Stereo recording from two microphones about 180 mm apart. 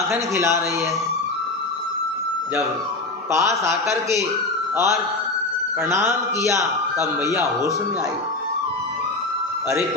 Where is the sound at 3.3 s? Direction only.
15° right (ahead or behind).